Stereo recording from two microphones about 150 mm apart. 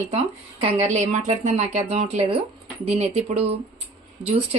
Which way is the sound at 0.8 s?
50° right (ahead or behind).